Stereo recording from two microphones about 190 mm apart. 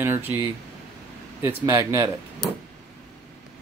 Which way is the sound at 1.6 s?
15° right (ahead or behind).